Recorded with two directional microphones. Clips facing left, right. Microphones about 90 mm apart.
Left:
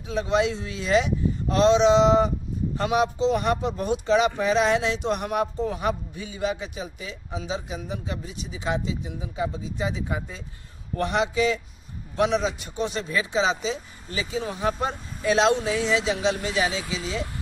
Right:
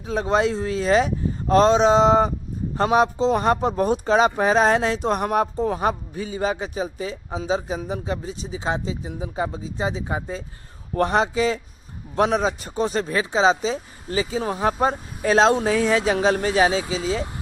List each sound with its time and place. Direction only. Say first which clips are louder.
0.0 s speech: right 3 dB; 40° right (ahead or behind)